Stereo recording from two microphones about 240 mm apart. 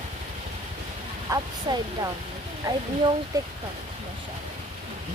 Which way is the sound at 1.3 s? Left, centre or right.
Centre.